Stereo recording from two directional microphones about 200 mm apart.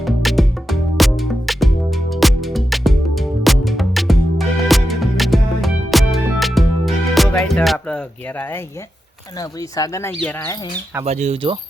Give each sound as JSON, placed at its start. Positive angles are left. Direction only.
{"t": 0.0, "sound": "music", "side_deg": 0}
{"t": 9.4, "sound": "speech", "side_deg": 20}
{"t": 11.0, "sound": "speech", "side_deg": -35}